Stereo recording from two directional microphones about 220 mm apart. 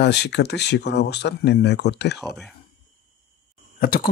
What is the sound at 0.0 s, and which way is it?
Speech, 50° left (ahead or behind).